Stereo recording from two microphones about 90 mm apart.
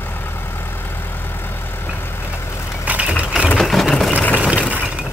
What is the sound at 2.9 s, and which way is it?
Vehicle, 15° right (ahead or behind).